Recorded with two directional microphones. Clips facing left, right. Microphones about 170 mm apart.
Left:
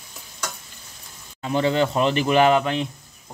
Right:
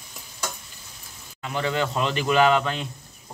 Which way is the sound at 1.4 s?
30° left (ahead or behind).